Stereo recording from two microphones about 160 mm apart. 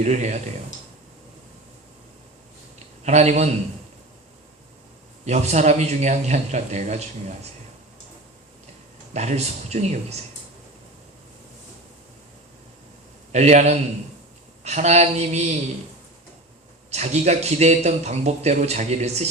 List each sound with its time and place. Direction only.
0.0 s a man's voice: 45° right (ahead or behind)
2.7 s a sound: 45° right (ahead or behind)
5.2 s a man's voice: 45° right (ahead or behind)
9.1 s a man's voice: 45° right (ahead or behind)
13.3 s a man's voice: 45° right (ahead or behind)
16.9 s a man's voice: 45° right (ahead or behind)